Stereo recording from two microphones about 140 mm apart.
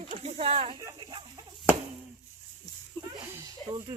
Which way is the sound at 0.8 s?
30° right (ahead or behind).